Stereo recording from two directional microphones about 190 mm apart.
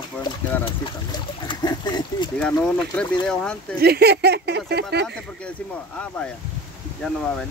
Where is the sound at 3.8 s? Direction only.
55° right (ahead or behind).